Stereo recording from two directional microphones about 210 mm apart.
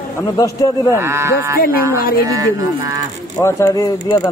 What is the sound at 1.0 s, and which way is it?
Speech, 10° right (ahead or behind).